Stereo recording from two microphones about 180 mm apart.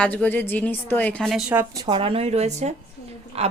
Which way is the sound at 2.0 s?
30° right (ahead or behind).